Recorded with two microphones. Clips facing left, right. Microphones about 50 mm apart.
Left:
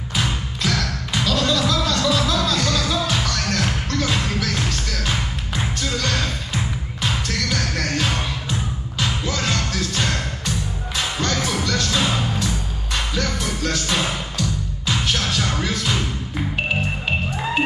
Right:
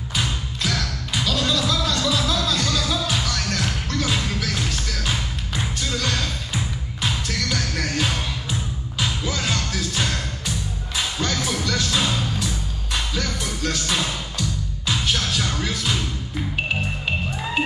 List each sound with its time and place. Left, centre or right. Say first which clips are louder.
0.1 s music: left 2 dB; centre
6.5 s music: left 2 dB; centre
15.0 s music: left 1 dB; centre